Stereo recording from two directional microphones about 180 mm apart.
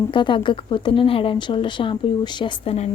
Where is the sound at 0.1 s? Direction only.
25° left (ahead or behind).